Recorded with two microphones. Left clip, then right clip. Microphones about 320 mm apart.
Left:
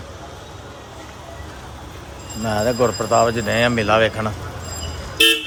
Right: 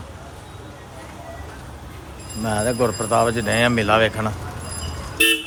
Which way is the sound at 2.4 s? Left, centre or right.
Centre.